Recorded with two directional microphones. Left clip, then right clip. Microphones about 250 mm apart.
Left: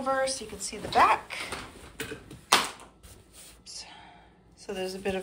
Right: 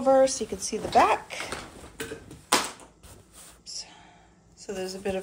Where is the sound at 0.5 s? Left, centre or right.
Centre.